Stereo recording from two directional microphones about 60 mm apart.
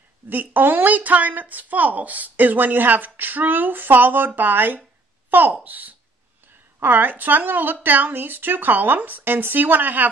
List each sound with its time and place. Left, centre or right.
0.3 s a woman's voice: right